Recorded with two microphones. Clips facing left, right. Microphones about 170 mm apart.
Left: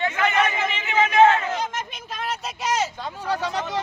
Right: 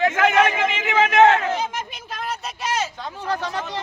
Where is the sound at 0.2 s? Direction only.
80° right.